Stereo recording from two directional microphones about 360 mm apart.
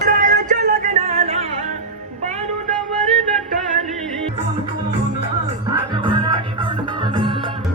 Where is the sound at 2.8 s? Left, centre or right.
Centre.